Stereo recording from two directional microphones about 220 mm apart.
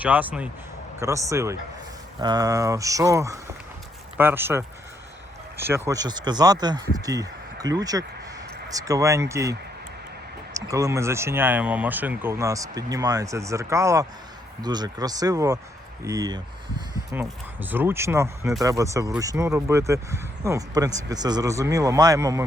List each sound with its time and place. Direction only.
0.0 s speech: 5° right (ahead or behind)